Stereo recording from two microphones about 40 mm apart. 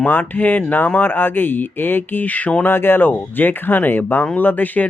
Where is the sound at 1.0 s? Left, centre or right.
Left.